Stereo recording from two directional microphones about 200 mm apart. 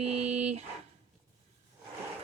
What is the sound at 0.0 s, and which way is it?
Dog, 35° right (ahead or behind).